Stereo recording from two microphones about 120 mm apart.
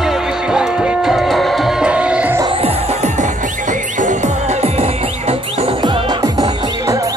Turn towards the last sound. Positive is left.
turn(degrees=-30)  # may be behind; listen again after turning